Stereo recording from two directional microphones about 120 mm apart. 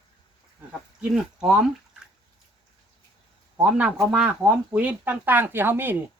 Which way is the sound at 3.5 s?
10° right (ahead or behind).